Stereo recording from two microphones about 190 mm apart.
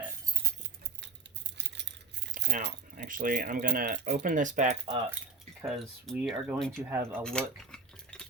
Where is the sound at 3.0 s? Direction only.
50° right (ahead or behind).